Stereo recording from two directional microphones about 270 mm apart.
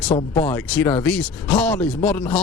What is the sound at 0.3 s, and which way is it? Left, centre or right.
Speech, centre.